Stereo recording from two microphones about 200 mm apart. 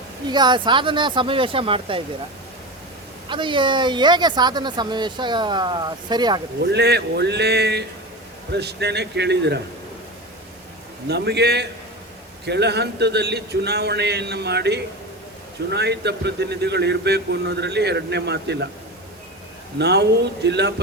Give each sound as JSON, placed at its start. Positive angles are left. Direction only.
{"t": 0.3, "sound": "speech", "side_deg": -20}
{"t": 3.2, "sound": "speech", "side_deg": -25}
{"t": 6.6, "sound": "a man's voice", "side_deg": -55}
{"t": 11.1, "sound": "a man's voice", "side_deg": -55}
{"t": 19.8, "sound": "a man's voice", "side_deg": -55}